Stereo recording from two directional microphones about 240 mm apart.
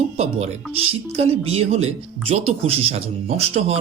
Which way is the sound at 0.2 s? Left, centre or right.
Right.